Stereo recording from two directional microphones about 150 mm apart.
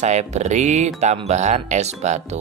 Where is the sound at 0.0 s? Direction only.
50° right (ahead or behind).